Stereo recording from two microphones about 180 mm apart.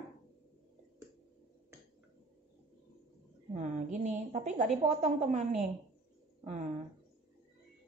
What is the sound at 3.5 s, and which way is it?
A woman's voice, 40° right (ahead or behind).